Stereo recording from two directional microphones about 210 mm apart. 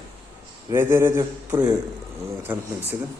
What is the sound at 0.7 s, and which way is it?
A man's voice, 10° right (ahead or behind).